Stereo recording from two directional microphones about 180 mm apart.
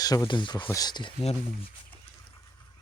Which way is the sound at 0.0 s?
20° left (ahead or behind).